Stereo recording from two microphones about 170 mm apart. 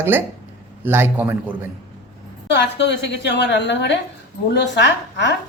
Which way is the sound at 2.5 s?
90° left.